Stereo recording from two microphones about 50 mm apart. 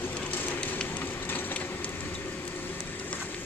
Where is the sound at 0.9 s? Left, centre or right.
Left.